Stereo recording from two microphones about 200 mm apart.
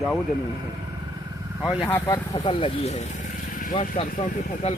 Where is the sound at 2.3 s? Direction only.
25° left (ahead or behind).